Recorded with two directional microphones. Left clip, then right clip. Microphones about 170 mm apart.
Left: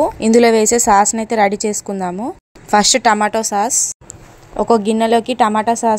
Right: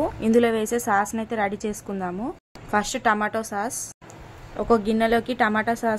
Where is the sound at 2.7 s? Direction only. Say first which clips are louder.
Left 10 dB; 40° left (ahead or behind).